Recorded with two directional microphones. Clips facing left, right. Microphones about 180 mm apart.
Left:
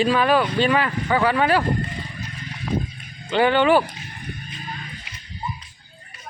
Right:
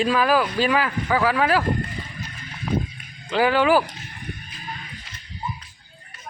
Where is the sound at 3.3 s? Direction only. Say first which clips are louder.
Left 1 dB; 5° right (ahead or behind).